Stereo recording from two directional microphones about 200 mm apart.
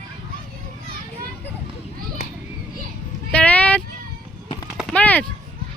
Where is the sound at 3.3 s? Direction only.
5° left (ahead or behind).